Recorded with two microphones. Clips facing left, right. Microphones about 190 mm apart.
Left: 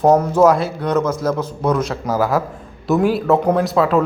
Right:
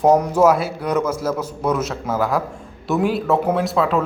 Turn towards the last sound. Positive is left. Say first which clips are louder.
# left 3 dB
turn(degrees=0)  # may be behind; listen again after turning